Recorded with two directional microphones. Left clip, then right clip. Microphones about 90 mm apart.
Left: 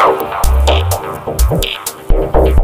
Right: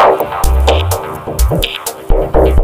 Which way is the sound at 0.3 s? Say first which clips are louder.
Right 1 dB; centre (ahead or behind).